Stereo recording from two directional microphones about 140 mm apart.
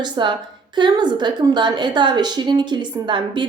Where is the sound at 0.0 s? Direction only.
35° right (ahead or behind).